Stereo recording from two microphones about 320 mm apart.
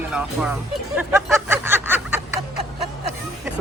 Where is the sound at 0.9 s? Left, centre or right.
Centre.